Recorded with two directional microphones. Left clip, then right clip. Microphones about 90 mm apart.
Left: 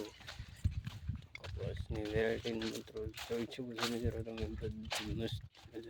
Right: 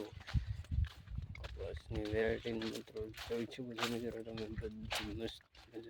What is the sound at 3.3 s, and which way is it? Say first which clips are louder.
Speech: left 1 dB; 15° left (ahead or behind).